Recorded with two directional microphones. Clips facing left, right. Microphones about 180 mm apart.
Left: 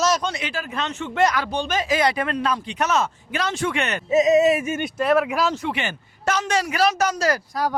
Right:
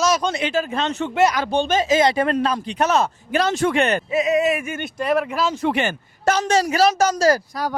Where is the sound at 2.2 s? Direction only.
35° right (ahead or behind).